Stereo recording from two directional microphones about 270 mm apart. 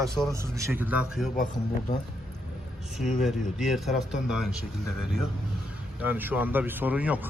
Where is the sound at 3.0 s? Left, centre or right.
Centre.